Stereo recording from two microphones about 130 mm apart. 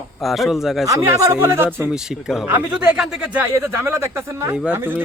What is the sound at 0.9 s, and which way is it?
Speech, 25° right (ahead or behind).